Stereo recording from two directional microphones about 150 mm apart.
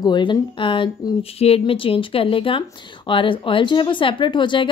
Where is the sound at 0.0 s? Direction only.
30° left (ahead or behind).